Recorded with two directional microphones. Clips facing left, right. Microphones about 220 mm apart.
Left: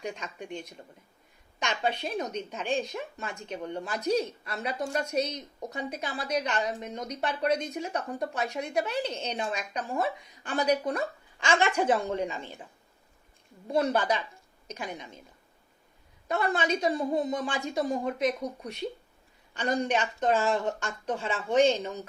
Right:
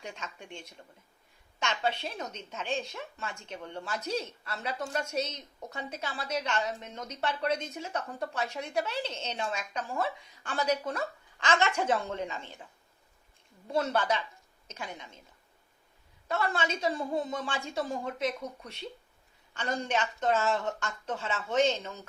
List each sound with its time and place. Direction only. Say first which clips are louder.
0.0 s speech: left 6 dB; 15° left (ahead or behind)
13.7 s speech: left 3 dB; 15° left (ahead or behind)
16.3 s speech: left 4 dB; 15° left (ahead or behind)